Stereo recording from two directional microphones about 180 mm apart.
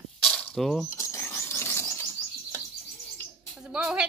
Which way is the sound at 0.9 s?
15° left (ahead or behind).